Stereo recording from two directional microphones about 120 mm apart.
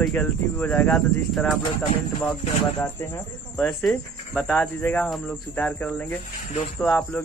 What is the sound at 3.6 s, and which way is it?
Speech, 5° left (ahead or behind).